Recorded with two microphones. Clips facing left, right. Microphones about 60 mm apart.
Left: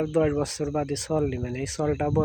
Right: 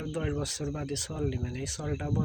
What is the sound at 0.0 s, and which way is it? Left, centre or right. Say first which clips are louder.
Speech: left 10 dB; left.